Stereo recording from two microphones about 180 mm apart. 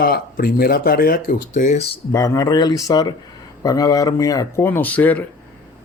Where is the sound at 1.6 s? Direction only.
40° left (ahead or behind).